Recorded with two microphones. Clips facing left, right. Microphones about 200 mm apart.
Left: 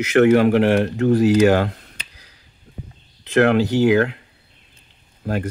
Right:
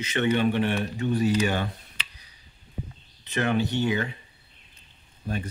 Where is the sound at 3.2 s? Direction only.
90° left.